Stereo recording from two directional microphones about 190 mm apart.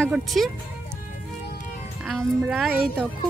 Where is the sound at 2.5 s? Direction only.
Centre (ahead or behind).